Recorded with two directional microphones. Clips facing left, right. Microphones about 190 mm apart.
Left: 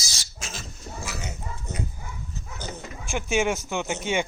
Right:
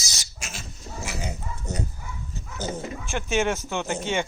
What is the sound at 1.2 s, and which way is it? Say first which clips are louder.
Dog: right 3 dB; 30° right (ahead or behind).